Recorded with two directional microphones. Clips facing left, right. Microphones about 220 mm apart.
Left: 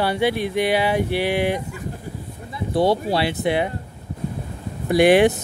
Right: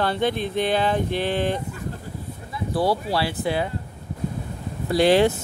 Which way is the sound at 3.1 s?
20° left (ahead or behind).